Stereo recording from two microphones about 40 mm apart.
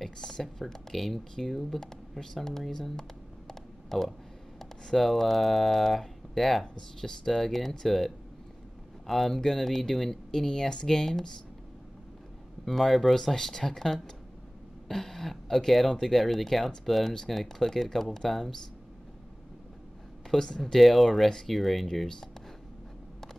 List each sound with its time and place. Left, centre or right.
0.4 s speech: centre
6.6 s speech: centre
10.7 s speech: left
11.0 s speech: centre
12.6 s speech: centre
20.4 s speech: centre
20.7 s speech: centre
21.3 s speech: centre
21.5 s speech: centre